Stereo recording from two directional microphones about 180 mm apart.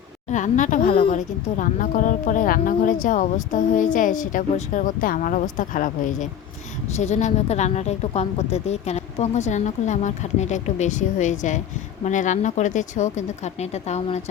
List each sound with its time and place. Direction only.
0.3 s speech: 45° left (ahead or behind)